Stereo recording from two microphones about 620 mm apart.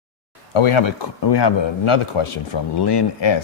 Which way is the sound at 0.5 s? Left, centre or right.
Left.